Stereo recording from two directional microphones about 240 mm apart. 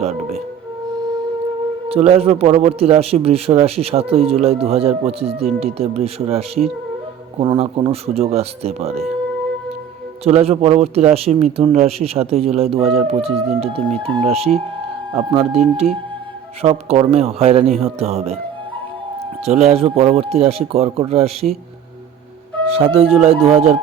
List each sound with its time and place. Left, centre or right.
0.0 s speech: right
0.9 s music: centre
1.9 s a man's voice: right
10.2 s a man's voice: right
19.5 s a man's voice: right
22.7 s a man's voice: right